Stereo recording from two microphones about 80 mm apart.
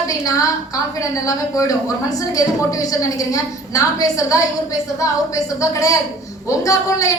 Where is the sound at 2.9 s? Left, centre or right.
Left.